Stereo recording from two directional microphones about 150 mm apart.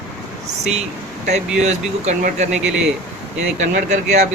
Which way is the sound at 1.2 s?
50° right (ahead or behind).